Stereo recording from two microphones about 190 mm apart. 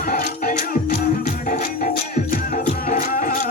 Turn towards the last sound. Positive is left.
turn(degrees=40)  # may be behind; listen again after turning